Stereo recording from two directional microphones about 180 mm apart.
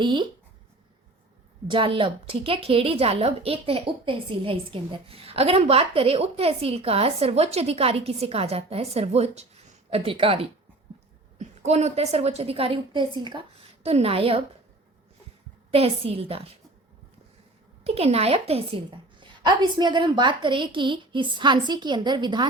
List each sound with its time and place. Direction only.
0.0 s a woman's voice: 25° right (ahead or behind)
1.7 s a woman's voice: 30° right (ahead or behind)
15.7 s a woman's voice: 35° right (ahead or behind)
17.8 s a woman's voice: 35° right (ahead or behind)